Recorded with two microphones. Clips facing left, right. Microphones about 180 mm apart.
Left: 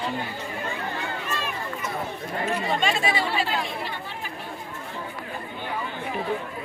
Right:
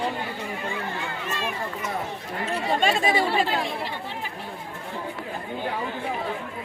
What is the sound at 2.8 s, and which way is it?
Chatter, 45° right (ahead or behind).